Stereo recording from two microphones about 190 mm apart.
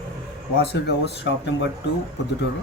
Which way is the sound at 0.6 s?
60° left (ahead or behind).